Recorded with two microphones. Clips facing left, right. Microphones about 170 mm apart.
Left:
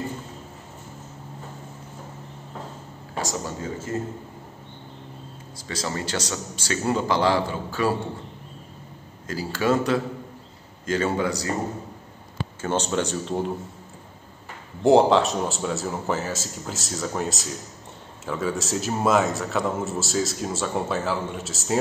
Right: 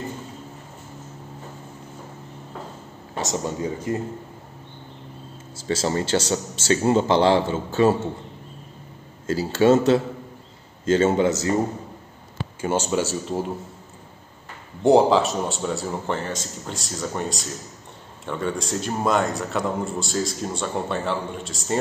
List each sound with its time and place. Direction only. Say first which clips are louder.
3.2 s a man's voice: right 3 dB; 20° right (ahead or behind)
5.6 s a man's voice: right 6 dB; 25° right (ahead or behind)
9.3 s a man's voice: right 6 dB; 25° right (ahead or behind)
12.6 s a man's voice: right 2 dB; 10° right (ahead or behind)
14.8 s a man's voice: right 1 dB; centre (ahead or behind)